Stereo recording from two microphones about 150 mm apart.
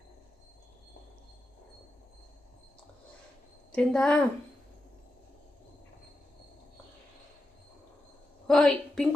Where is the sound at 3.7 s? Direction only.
5° left (ahead or behind).